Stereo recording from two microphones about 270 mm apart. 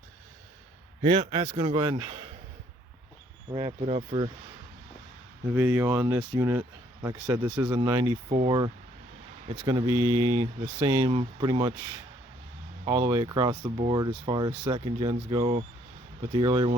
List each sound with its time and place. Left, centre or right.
1.0 s speech: right
3.5 s speech: centre
5.5 s speech: centre